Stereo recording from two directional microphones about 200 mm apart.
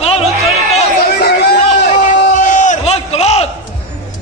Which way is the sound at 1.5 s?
30° left (ahead or behind).